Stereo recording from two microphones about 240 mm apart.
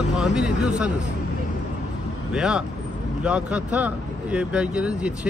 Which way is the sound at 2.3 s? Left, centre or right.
Centre.